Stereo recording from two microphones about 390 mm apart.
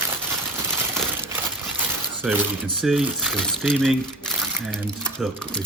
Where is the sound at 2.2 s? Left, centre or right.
Centre.